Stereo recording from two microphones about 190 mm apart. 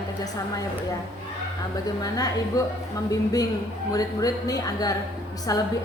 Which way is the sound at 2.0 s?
20° left (ahead or behind).